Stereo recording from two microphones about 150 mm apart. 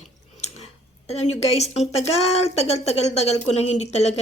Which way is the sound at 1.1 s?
45° left (ahead or behind).